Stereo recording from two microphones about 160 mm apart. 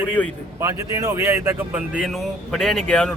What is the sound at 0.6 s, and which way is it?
Speech, 20° right (ahead or behind).